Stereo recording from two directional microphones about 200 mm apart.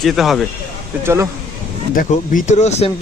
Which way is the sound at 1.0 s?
15° right (ahead or behind).